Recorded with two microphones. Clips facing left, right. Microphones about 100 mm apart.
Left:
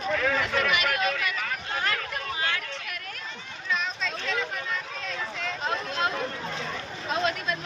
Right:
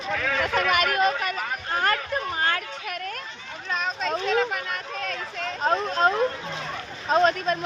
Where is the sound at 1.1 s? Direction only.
40° right (ahead or behind).